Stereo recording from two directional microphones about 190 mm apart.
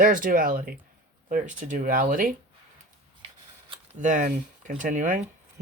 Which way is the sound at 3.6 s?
25° right (ahead or behind).